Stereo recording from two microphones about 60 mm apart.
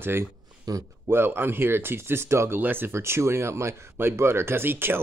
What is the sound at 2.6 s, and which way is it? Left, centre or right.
Speech, right.